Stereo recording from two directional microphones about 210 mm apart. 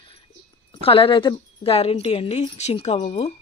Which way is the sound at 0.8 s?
25° left (ahead or behind).